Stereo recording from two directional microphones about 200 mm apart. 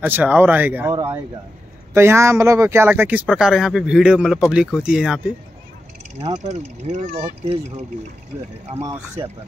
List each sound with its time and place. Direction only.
0.0 s speech: 10° right (ahead or behind)
0.9 s speech: 20° right (ahead or behind); by 5.2 s 5° right (ahead or behind)
6.2 s speech: 35° right (ahead or behind)
8.8 s speech: 15° right (ahead or behind)